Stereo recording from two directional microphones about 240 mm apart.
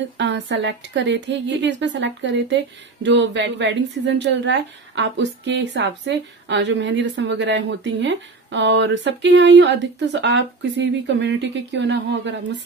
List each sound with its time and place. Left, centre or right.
0.2 s a woman's voice: right